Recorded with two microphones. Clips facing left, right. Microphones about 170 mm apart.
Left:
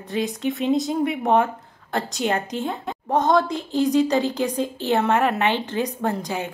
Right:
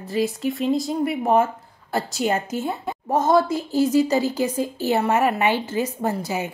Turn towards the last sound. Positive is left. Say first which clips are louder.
# right 1 dB
turn(degrees=-5)  # may be behind; listen again after turning